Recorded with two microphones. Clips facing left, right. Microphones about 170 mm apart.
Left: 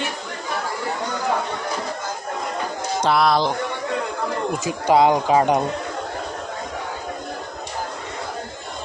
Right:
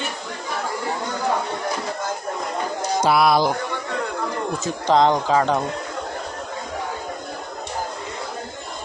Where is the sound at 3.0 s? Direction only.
10° right (ahead or behind).